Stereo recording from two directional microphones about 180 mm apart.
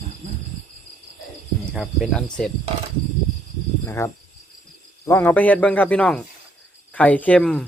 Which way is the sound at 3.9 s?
15° left (ahead or behind).